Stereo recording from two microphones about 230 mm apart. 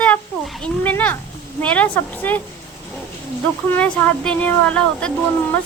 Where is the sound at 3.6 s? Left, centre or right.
Centre.